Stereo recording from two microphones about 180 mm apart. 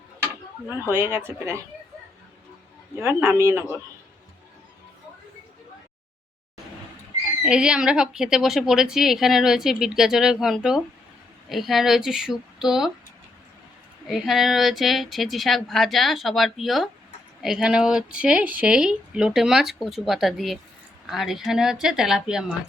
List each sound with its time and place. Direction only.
0.9 s speech: 10° right (ahead or behind)
2.9 s speech: 15° right (ahead or behind)
7.4 s a woman's voice: 5° right (ahead or behind)
14.1 s a woman's voice: centre (ahead or behind)